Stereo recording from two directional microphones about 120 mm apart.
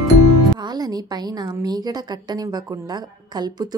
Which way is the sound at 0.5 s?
35° right (ahead or behind).